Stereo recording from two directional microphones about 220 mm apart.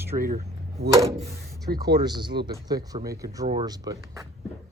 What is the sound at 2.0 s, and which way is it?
Speech, 20° right (ahead or behind).